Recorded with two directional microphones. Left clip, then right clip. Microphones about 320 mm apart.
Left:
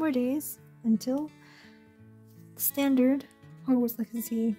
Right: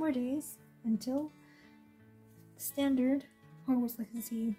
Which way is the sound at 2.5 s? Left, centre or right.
Left.